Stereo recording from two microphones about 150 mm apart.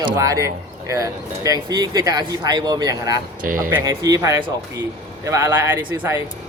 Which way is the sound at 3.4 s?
65° right (ahead or behind).